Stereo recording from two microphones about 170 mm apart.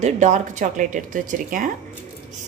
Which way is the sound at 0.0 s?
45° right (ahead or behind).